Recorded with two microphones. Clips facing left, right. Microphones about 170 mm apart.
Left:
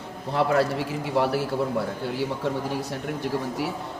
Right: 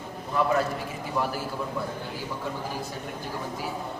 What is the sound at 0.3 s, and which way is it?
A man's voice, 75° left (ahead or behind).